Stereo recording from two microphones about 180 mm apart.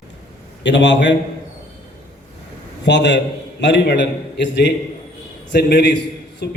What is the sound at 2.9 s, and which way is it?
A man's voice, 75° left (ahead or behind).